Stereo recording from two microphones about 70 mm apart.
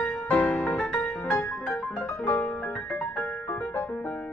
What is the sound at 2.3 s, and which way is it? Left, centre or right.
Music, left.